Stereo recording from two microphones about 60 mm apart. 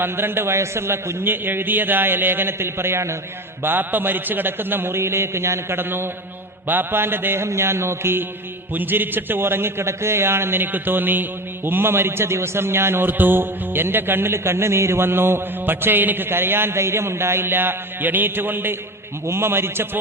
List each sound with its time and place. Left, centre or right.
0.0 s a man's voice: right
3.6 s a man's voice: right
7.4 s a sound: right
8.7 s a man's voice: right